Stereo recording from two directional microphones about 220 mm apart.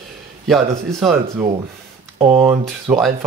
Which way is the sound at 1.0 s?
15° right (ahead or behind).